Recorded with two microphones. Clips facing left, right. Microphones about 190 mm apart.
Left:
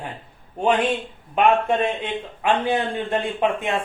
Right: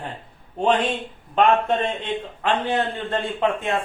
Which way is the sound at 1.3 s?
10° left (ahead or behind).